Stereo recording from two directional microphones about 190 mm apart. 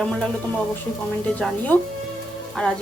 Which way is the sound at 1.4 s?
10° left (ahead or behind).